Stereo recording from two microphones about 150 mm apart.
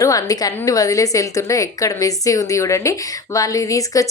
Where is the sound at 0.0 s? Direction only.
25° left (ahead or behind).